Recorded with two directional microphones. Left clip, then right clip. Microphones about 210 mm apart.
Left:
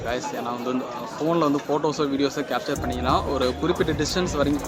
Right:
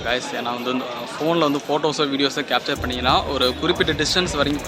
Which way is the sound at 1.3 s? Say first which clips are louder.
Right 3 dB; 5° left (ahead or behind).